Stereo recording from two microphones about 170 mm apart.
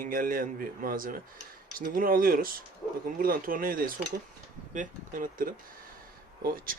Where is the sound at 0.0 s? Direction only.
55° right (ahead or behind).